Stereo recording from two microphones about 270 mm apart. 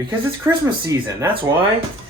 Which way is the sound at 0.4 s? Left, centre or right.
Centre.